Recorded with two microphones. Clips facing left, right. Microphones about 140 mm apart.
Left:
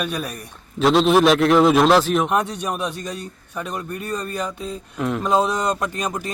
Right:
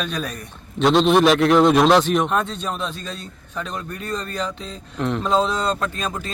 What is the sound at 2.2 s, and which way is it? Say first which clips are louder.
Speech: left 1 dB; 15° left (ahead or behind).